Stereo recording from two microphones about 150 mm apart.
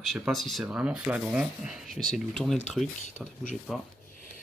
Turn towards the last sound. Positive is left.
turn(degrees=0)  # may be behind; listen again after turning